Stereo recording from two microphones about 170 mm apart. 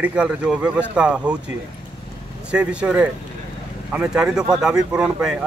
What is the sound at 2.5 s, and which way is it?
Speech, 5° right (ahead or behind).